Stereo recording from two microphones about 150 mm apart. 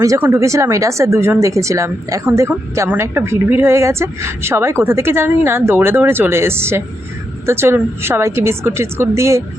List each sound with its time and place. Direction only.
0.0 s speech: 20° right (ahead or behind)